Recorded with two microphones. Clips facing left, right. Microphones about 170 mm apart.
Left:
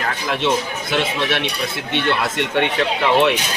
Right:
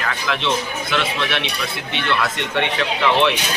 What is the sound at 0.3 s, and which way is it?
Speech, 45° left (ahead or behind).